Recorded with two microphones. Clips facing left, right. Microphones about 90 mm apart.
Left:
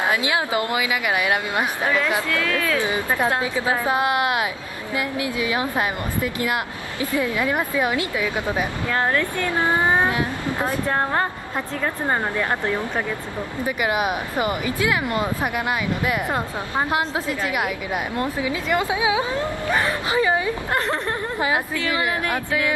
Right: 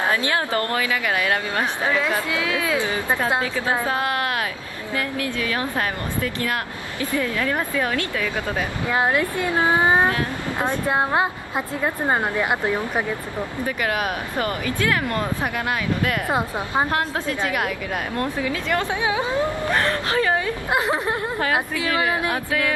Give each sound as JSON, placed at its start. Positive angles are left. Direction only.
{"t": 0.0, "sound": "speech", "side_deg": 15}
{"t": 2.2, "sound": "a woman's voice", "side_deg": -10}
{"t": 3.8, "sound": "speech", "side_deg": 15}
{"t": 8.8, "sound": "a woman's voice", "side_deg": -15}
{"t": 13.7, "sound": "speech", "side_deg": 10}
{"t": 16.3, "sound": "a woman's voice", "side_deg": -15}
{"t": 16.9, "sound": "speech", "side_deg": 5}
{"t": 20.7, "sound": "a woman's voice", "side_deg": -10}
{"t": 22.3, "sound": "music", "side_deg": 5}